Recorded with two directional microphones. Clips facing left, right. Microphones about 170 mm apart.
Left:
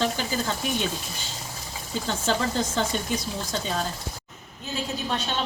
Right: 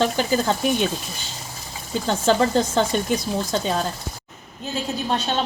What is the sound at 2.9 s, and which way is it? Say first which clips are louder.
Speech: right 6 dB; 65° right (ahead or behind).